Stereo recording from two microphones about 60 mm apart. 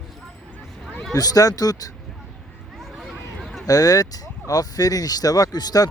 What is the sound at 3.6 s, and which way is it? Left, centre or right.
Speech, left.